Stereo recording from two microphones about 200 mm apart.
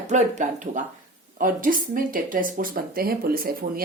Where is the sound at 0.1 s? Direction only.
35° right (ahead or behind).